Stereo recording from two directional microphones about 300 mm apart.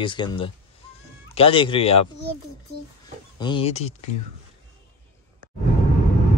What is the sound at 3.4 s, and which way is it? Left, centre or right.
Speech, centre.